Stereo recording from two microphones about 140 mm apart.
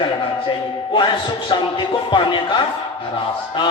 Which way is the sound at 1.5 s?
35° left (ahead or behind).